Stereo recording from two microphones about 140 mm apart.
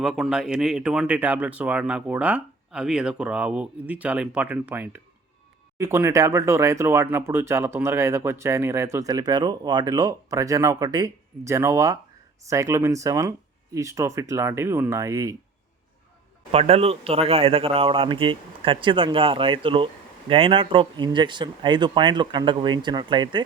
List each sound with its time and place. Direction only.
0.0 s speech: 5° right (ahead or behind); by 15.4 s 25° right (ahead or behind)
16.5 s speech: 45° right (ahead or behind)